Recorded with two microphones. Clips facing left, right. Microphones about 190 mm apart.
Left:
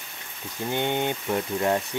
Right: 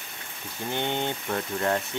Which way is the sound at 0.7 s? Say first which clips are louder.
Left 3 dB; 15° left (ahead or behind).